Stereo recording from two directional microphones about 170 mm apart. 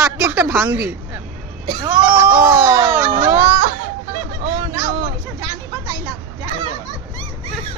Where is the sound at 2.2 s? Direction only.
10° right (ahead or behind).